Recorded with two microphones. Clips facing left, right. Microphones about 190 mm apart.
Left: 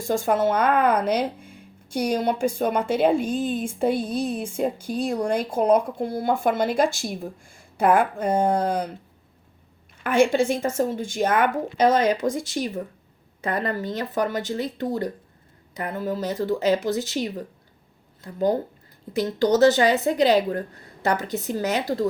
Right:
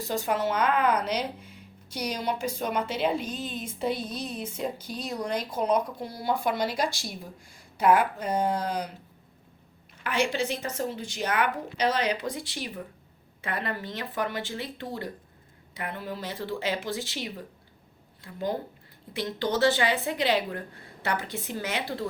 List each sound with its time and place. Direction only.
0.0 s speech: 50° left (ahead or behind)
10.0 s a woman's voice: 50° left (ahead or behind)